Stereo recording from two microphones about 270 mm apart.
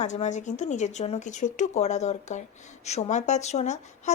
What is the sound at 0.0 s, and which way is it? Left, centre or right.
Speech, left.